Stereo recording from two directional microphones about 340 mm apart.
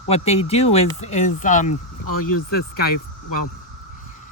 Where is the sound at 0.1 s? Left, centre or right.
Centre.